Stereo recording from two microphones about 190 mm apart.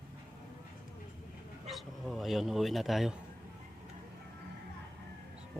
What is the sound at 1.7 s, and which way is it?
Speech, centre (ahead or behind).